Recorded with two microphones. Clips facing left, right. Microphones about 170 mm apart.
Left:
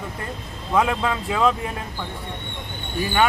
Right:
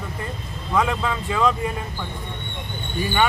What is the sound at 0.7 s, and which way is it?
Speech, 10° left (ahead or behind).